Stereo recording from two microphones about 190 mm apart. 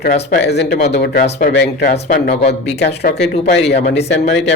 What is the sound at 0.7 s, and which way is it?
Speech, 40° left (ahead or behind).